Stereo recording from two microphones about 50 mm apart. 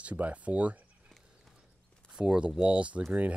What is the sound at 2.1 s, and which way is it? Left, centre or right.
Speech, centre.